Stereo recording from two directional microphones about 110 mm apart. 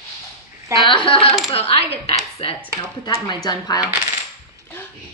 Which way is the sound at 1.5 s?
65° left (ahead or behind).